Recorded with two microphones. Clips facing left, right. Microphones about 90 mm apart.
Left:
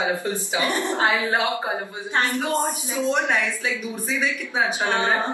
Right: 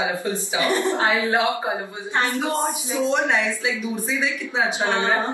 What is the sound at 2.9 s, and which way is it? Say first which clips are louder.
Speech: right 2 dB; 20° right (ahead or behind).